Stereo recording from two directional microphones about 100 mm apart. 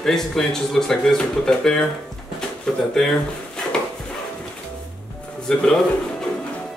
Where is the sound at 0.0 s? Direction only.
5° left (ahead or behind).